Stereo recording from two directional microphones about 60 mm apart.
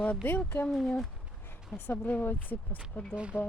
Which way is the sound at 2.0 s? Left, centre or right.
Left.